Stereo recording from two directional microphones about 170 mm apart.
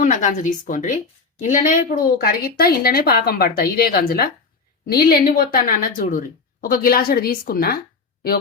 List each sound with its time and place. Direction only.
0.0 s a woman's voice: 50° left (ahead or behind)